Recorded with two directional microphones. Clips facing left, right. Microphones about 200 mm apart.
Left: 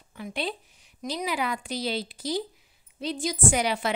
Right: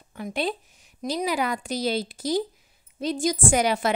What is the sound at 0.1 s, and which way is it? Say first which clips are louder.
A woman's voice: right 4 dB; 45° right (ahead or behind).